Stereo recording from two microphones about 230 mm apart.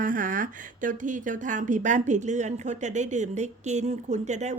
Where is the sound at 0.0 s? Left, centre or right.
Right.